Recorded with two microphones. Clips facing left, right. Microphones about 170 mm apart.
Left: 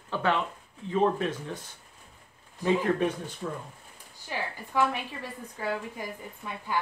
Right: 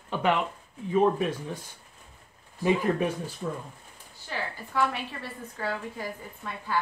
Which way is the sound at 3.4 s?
5° right (ahead or behind).